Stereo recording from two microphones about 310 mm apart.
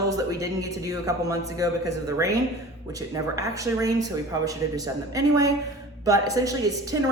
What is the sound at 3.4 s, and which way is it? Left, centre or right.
Speech, centre.